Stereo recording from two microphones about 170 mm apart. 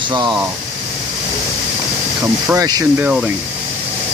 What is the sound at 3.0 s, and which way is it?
Speech, 5° right (ahead or behind).